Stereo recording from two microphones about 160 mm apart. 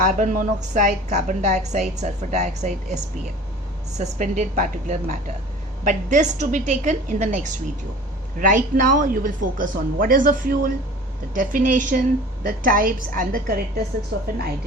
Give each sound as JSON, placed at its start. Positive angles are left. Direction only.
{"t": 0.0, "sound": "a woman's voice", "side_deg": -55}